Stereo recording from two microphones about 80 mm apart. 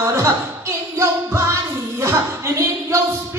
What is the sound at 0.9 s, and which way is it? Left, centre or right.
Music, right.